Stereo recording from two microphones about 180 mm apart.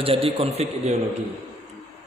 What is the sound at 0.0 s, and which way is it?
Speech, 30° right (ahead or behind).